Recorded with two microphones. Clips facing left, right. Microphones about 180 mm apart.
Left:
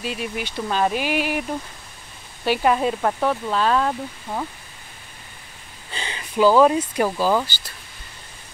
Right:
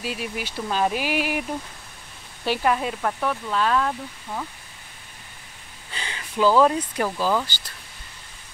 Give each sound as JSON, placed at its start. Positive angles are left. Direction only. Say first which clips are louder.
{"t": 0.0, "sound": "speech", "louder": "left 2 dB", "side_deg": -5}
{"t": 2.6, "sound": "speech", "louder": "left 4 dB", "side_deg": 30}
{"t": 5.9, "sound": "a sound", "louder": "left 3 dB", "side_deg": 25}
{"t": 6.6, "sound": "speech", "louder": "left 3 dB", "side_deg": 15}